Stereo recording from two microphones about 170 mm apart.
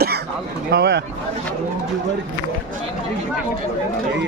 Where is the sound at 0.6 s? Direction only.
75° right (ahead or behind).